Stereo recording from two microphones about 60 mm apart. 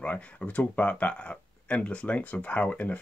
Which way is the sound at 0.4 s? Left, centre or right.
Left.